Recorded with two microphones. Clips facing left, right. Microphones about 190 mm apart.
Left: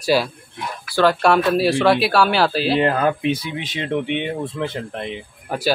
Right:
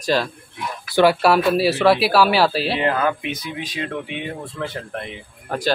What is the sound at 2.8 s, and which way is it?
Speech, 40° left (ahead or behind).